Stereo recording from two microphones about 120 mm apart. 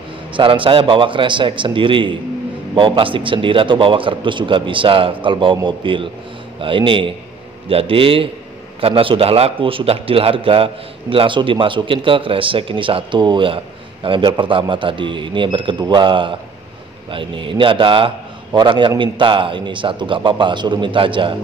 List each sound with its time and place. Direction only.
0.3 s a man's voice: 45° right (ahead or behind)